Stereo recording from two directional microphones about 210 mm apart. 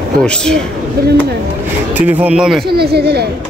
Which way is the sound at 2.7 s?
50° right (ahead or behind).